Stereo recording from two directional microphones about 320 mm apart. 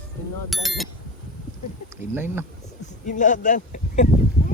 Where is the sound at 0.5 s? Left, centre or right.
Centre.